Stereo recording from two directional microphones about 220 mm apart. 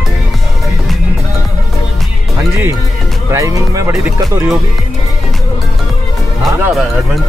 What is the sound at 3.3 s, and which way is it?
Speech, 15° right (ahead or behind).